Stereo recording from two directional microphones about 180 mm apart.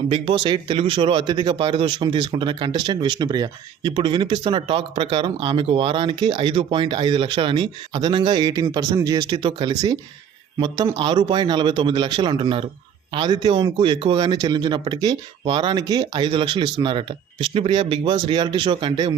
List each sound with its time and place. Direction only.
0.1 s a man's voice: 25° right (ahead or behind)